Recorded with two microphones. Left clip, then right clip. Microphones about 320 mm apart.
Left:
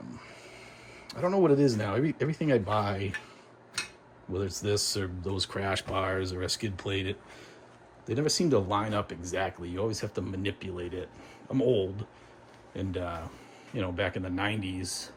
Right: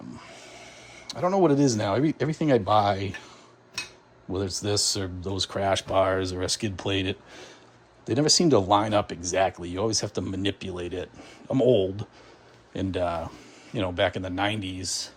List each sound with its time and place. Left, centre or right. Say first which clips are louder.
0.2 s speech: right 3 dB; centre
4.3 s speech: right 3 dB; centre